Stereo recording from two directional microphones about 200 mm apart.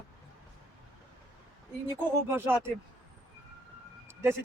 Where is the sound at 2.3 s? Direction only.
10° right (ahead or behind).